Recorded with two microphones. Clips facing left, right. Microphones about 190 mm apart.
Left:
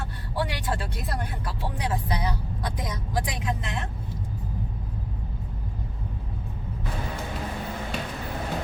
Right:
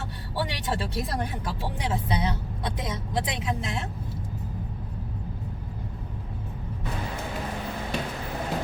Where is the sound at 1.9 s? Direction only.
25° right (ahead or behind).